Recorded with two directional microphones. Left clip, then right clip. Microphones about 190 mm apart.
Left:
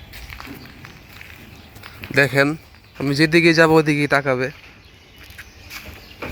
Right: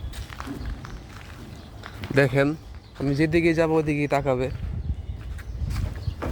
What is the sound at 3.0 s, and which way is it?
Speech, 25° left (ahead or behind).